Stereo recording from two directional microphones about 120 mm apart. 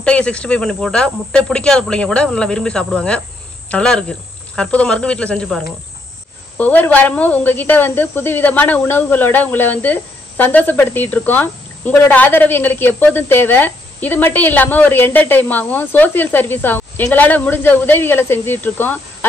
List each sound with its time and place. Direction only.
0.0 s speech: 10° left (ahead or behind)
6.6 s speech: 15° left (ahead or behind)